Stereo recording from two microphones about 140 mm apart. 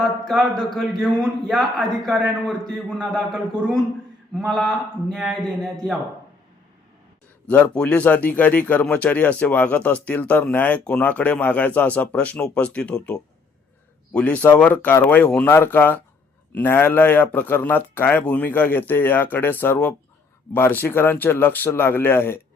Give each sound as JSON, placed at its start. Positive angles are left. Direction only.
{"t": 0.0, "sound": "a man's voice", "side_deg": 0}
{"t": 7.4, "sound": "speech", "side_deg": 10}